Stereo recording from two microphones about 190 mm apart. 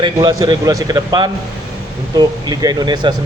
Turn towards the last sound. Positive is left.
turn(degrees=-20)  # may be behind; listen again after turning